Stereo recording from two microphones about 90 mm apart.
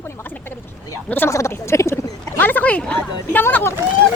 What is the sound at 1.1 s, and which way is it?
Speech, 30° left (ahead or behind).